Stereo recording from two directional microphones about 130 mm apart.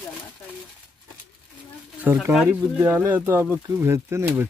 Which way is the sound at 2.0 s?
15° right (ahead or behind).